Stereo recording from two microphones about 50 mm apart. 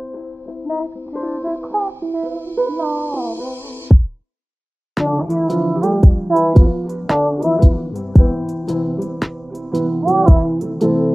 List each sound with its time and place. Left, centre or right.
1.4 s music: left
1.9 s music: right
2.2 s music: left
2.9 s music: right
3.2 s music: left
3.9 s music: centre